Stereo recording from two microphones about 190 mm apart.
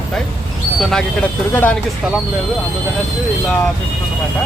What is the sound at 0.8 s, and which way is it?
Speech, centre (ahead or behind).